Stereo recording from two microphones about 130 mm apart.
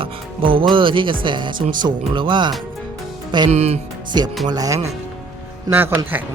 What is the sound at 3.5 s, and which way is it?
Speech, 55° right (ahead or behind).